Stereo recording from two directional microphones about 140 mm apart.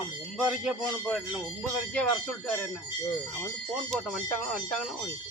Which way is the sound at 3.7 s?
Centre (ahead or behind).